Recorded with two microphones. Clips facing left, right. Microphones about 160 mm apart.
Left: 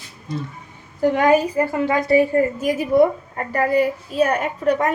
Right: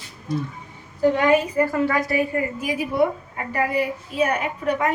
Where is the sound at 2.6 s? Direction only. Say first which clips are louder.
Left 4 dB; 45° left (ahead or behind).